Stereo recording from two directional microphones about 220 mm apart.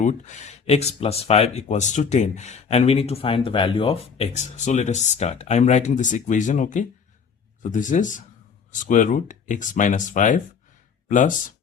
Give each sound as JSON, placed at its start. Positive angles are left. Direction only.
{"t": 0.0, "sound": "speech", "side_deg": 35}